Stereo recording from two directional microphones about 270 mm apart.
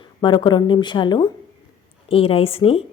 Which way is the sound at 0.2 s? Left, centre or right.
Centre.